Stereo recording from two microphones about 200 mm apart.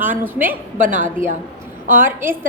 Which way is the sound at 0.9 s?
40° right (ahead or behind).